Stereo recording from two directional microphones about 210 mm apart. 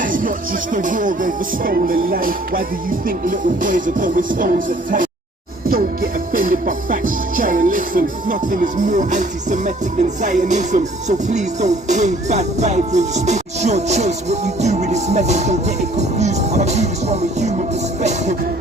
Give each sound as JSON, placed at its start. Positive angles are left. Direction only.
{"t": 0.0, "sound": "music", "side_deg": -40}